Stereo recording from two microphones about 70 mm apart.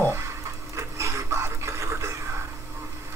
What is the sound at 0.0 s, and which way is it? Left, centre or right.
Printer, right.